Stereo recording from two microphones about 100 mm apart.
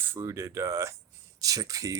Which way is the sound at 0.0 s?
25° right (ahead or behind).